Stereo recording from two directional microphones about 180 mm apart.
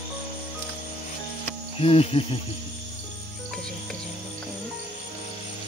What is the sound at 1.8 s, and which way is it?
Cricket, 35° left (ahead or behind).